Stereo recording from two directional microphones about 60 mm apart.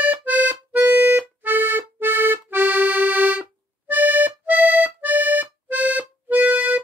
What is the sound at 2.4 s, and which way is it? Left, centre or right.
Accordion, right.